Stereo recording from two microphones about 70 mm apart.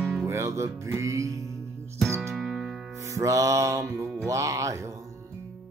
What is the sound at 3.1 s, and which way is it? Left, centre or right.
Music, right.